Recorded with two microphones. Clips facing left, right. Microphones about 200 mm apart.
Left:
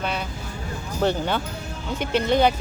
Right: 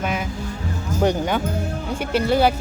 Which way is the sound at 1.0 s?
15° right (ahead or behind).